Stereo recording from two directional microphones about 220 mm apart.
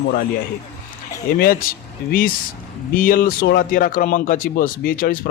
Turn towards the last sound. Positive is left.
turn(degrees=40)  # may be behind; listen again after turning